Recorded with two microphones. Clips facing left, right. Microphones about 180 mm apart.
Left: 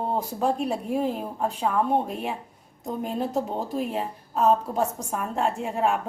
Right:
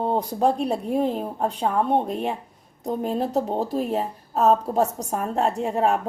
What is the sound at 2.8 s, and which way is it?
A woman's voice, 35° right (ahead or behind).